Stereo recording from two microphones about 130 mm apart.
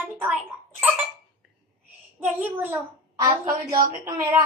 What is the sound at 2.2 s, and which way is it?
Speech, 15° right (ahead or behind).